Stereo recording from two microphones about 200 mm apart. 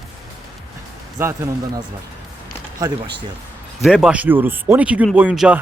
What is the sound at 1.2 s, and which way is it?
Speech, 10° right (ahead or behind).